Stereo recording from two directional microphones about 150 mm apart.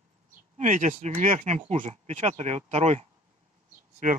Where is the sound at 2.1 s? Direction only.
55° right (ahead or behind).